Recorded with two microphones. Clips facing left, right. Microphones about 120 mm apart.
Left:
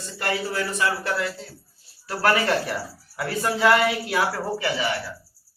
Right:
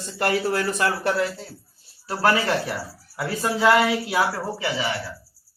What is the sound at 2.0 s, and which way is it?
Speech, 20° right (ahead or behind).